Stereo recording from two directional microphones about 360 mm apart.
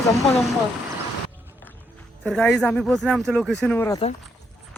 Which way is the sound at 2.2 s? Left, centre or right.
Centre.